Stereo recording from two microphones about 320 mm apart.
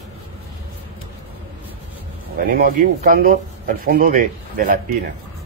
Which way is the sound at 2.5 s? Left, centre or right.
Right.